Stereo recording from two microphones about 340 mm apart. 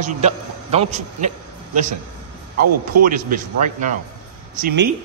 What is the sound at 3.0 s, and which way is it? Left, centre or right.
Speech, right.